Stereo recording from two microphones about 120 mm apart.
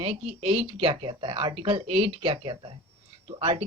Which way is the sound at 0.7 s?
45° right (ahead or behind).